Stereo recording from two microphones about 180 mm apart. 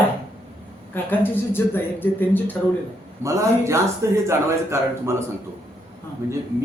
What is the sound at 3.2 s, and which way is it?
A man's voice, 15° right (ahead or behind).